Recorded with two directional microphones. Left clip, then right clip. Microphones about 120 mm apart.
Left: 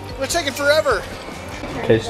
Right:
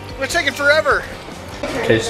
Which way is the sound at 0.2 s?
15° left (ahead or behind).